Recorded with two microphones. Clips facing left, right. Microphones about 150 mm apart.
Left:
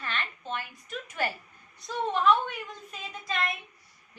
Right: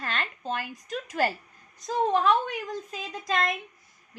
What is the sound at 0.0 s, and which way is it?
A woman's voice, 40° right (ahead or behind).